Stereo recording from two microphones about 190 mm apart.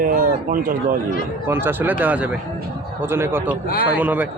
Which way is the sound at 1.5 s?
10° right (ahead or behind).